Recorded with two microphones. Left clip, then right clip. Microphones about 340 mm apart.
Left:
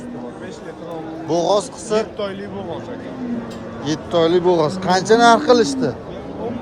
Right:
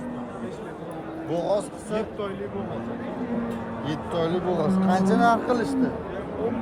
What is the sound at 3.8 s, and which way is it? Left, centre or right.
Speech, centre.